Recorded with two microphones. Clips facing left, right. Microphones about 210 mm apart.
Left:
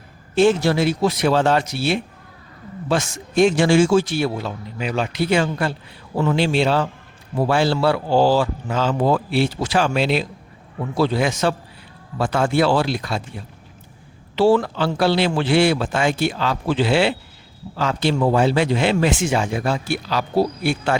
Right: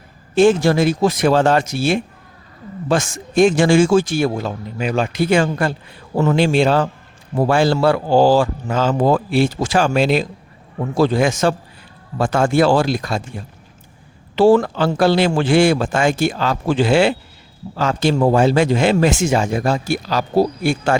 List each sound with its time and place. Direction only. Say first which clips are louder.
0.3 s a man's voice: right 3 dB; 45° right (ahead or behind)
14.3 s a man's voice: right 4 dB; 50° right (ahead or behind)